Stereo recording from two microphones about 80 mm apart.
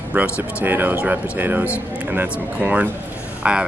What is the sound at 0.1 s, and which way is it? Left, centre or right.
Speech, right.